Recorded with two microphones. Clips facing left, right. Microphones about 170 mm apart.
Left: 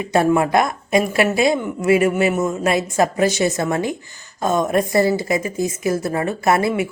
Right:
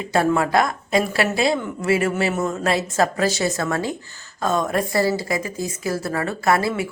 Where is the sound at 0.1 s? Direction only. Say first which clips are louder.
Left 3 dB; 20° left (ahead or behind).